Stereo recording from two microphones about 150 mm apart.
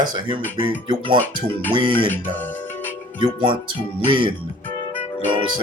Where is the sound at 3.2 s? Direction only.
35° right (ahead or behind).